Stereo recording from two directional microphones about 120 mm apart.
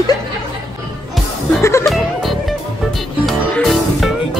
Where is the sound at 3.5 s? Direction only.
Centre (ahead or behind).